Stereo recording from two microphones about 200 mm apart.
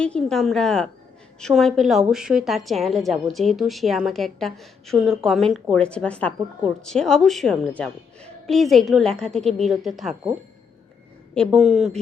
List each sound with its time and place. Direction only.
0.0 s a woman's voice: 5° left (ahead or behind)
11.3 s a woman's voice: centre (ahead or behind)